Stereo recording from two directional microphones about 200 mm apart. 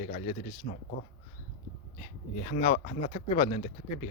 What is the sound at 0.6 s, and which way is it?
Speech, 45° left (ahead or behind).